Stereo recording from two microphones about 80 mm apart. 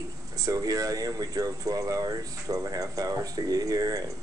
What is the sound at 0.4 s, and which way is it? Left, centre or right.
Speech, right.